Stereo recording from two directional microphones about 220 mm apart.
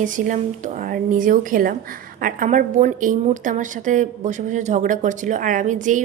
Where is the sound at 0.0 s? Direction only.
35° right (ahead or behind).